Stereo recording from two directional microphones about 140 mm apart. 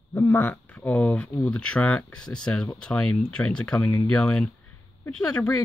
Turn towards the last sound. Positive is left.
turn(degrees=10)  # may be behind; listen again after turning